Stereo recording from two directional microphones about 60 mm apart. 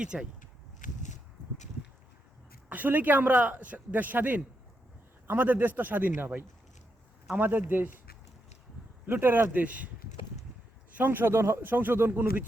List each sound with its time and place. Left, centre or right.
0.0 s speech: centre
2.6 s speech: right
9.0 s speech: right
10.9 s speech: right